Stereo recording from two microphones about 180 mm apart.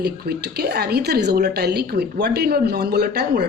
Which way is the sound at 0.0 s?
60° right (ahead or behind).